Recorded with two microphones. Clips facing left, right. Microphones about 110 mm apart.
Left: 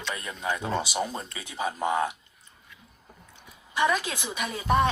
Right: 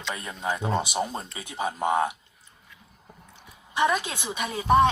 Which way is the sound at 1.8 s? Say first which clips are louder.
Right 3 dB; 25° right (ahead or behind).